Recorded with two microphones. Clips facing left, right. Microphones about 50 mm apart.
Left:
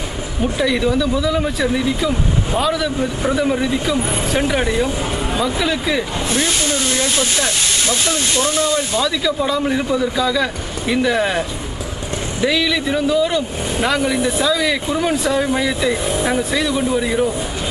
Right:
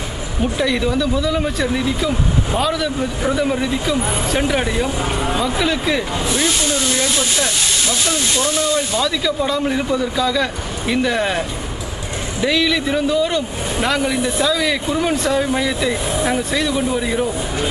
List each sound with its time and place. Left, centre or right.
0.4 s speech: centre
6.4 s speech: centre
7.3 s speech: left
8.9 s speech: centre